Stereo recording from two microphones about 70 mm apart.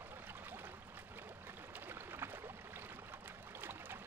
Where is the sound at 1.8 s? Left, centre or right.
Right.